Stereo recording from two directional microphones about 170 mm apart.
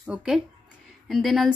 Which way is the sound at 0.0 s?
5° right (ahead or behind).